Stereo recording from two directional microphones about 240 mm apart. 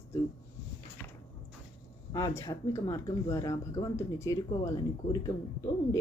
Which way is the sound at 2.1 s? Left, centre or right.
Centre.